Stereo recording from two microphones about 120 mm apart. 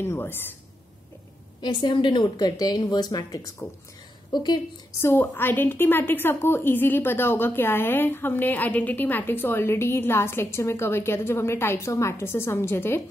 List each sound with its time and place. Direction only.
0.0 s a woman's voice: 20° left (ahead or behind)
1.6 s a woman's voice: 40° left (ahead or behind)
5.0 s a woman's voice: 20° left (ahead or behind)